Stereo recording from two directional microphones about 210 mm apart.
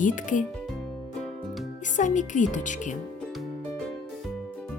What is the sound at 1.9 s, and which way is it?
Speech, 35° left (ahead or behind).